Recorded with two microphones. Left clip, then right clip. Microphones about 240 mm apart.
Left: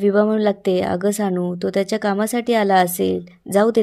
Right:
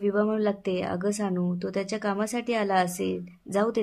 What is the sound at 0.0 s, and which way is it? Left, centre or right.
A woman's voice, left.